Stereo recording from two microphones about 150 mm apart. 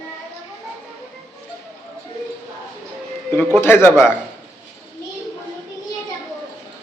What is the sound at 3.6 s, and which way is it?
Speech, 15° left (ahead or behind).